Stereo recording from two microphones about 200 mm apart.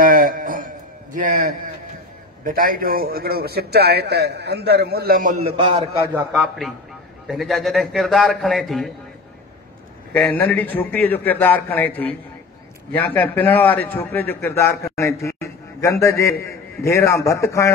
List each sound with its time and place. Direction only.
0.0 s a sound: 45° right (ahead or behind)
1.1 s a man's voice: 40° right (ahead or behind)
5.4 s a man's voice: 30° right (ahead or behind)
6.3 s a man's voice: 5° right (ahead or behind)
10.1 s a man's voice: 5° left (ahead or behind)